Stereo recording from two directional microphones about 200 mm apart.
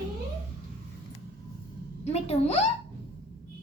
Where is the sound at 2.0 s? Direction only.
30° left (ahead or behind).